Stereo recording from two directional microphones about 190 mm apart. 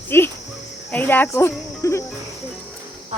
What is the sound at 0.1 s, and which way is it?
Speech, 10° left (ahead or behind).